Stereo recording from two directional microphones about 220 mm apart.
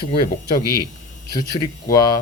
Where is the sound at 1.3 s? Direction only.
20° left (ahead or behind).